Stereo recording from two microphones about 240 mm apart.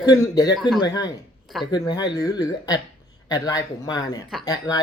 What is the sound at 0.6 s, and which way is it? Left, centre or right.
Speech, centre.